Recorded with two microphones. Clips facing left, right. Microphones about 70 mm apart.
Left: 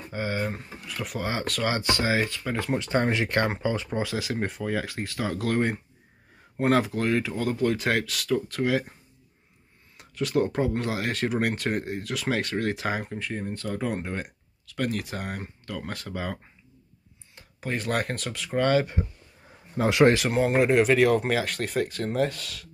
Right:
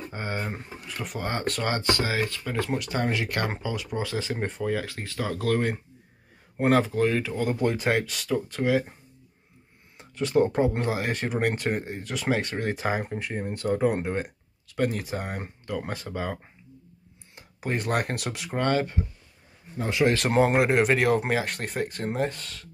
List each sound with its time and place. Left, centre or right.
0.1 s speech: centre
1.8 s speech: centre
2.8 s speech: left
4.0 s speech: centre
4.8 s speech: centre
10.1 s speech: centre
13.1 s speech: centre
17.4 s speech: centre
18.6 s speech: centre
20.0 s speech: left
20.5 s speech: centre